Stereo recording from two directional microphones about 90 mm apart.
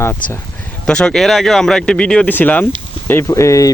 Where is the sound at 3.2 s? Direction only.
35° left (ahead or behind).